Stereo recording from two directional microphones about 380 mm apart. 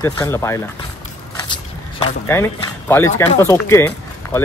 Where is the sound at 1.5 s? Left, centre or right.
Centre.